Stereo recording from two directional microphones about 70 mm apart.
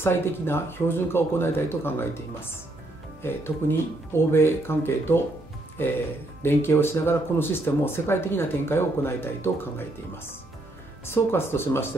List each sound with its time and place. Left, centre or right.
0.0 s speech: left
3.2 s speech: left
6.4 s speech: left